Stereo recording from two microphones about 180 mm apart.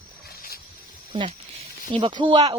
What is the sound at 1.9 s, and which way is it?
Speech, 25° right (ahead or behind).